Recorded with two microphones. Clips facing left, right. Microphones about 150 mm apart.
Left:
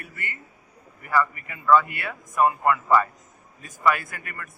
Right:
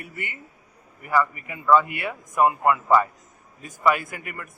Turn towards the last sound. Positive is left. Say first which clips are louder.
# right 3 dB
turn(degrees=-15)  # may be behind; listen again after turning